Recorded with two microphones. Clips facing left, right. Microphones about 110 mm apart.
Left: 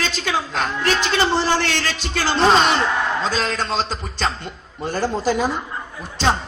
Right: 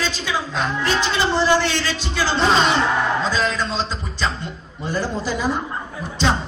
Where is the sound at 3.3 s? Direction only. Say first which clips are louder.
Even; 60° left (ahead or behind).